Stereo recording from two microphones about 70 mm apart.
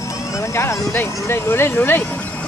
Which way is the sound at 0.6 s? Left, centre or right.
Left.